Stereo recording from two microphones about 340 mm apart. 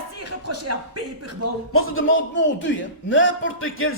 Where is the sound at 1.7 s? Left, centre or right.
Left.